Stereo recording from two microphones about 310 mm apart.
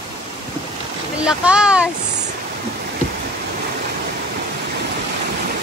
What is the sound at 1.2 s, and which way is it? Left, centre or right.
Speech, centre.